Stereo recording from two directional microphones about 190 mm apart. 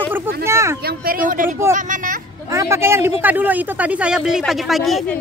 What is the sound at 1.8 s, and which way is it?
Vehicle, 45° right (ahead or behind).